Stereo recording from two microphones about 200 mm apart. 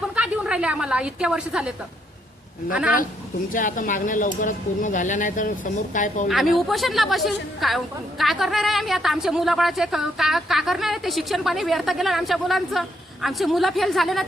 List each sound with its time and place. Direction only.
0.2 s a woman's voice: 5° right (ahead or behind)
3.5 s speech: 40° left (ahead or behind)
6.2 s speech: centre (ahead or behind)